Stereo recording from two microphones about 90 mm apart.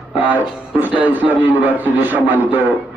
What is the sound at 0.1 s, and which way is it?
Speech, 20° right (ahead or behind).